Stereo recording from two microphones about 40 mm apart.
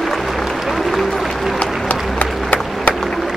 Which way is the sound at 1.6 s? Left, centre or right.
Left.